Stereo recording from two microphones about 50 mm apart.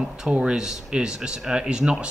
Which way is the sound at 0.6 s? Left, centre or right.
Centre.